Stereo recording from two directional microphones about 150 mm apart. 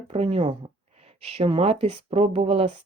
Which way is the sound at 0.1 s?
40° right (ahead or behind).